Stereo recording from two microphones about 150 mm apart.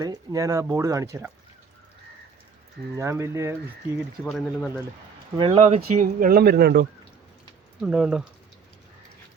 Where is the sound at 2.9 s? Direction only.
20° right (ahead or behind).